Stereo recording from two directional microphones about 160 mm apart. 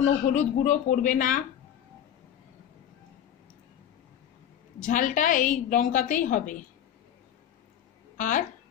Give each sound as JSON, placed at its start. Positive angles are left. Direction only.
{"t": 0.0, "sound": "a woman's voice", "side_deg": 50}
{"t": 4.8, "sound": "a woman's voice", "side_deg": 55}
{"t": 8.2, "sound": "a woman's voice", "side_deg": 55}